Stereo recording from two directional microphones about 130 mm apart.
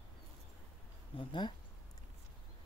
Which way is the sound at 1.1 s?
40° left (ahead or behind).